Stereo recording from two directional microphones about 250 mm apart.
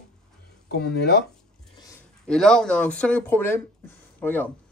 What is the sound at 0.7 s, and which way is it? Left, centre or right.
Speech, left.